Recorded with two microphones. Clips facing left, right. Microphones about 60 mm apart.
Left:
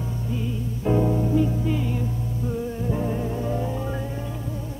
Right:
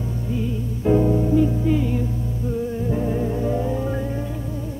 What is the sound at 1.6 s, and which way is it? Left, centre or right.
Music, right.